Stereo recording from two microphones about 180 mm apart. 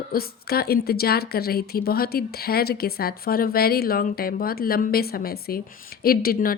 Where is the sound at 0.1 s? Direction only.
55° left (ahead or behind).